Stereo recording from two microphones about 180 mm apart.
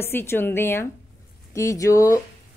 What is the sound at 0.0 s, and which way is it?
A woman's voice, 10° left (ahead or behind).